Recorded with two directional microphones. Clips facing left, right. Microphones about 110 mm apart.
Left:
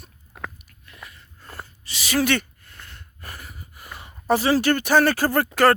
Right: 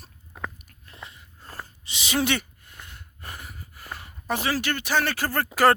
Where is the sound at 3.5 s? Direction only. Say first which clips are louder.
Left 1 dB; 15° left (ahead or behind).